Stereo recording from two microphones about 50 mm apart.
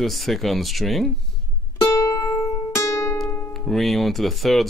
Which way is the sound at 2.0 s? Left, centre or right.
Left.